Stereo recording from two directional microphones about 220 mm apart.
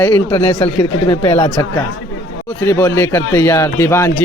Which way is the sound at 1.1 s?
20° left (ahead or behind).